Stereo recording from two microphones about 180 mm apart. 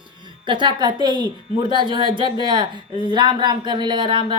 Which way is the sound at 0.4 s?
25° right (ahead or behind).